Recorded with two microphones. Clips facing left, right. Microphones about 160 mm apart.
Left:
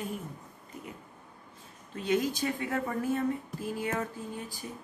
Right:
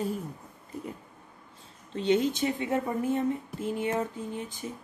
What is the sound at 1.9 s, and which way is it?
Speech, 25° right (ahead or behind).